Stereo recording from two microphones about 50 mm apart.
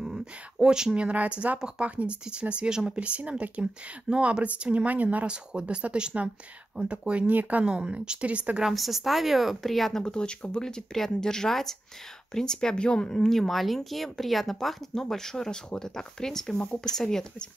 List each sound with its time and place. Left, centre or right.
0.0 s speech: centre
7.2 s speech: right
7.6 s speech: centre
8.6 s speech: centre
10.0 s speech: centre
16.5 s speech: left
16.9 s speech: centre